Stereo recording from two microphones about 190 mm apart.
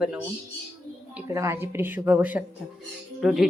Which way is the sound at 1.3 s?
15° right (ahead or behind).